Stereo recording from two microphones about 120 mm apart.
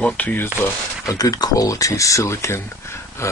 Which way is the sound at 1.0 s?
30° left (ahead or behind).